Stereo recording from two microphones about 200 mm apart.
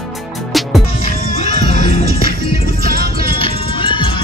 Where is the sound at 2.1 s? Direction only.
50° right (ahead or behind).